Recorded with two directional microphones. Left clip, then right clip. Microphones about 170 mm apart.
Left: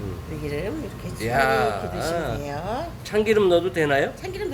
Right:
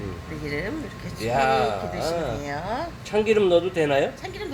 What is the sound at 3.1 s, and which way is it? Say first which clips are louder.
Speech: even; 10° right (ahead or behind).